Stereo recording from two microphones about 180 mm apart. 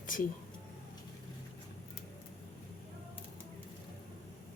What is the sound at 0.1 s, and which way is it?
Speech, 50° left (ahead or behind).